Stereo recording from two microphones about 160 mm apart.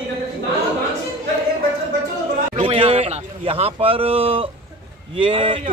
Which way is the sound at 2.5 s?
35° right (ahead or behind).